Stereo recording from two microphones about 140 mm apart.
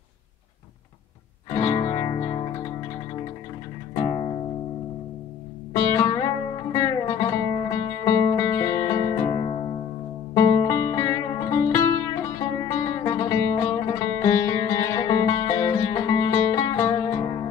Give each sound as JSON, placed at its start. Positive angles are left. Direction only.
{"t": 1.5, "sound": "music", "side_deg": 25}
{"t": 3.9, "sound": "music", "side_deg": 25}
{"t": 5.7, "sound": "music", "side_deg": 25}